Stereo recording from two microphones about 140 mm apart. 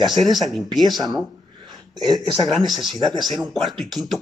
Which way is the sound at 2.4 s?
Centre (ahead or behind).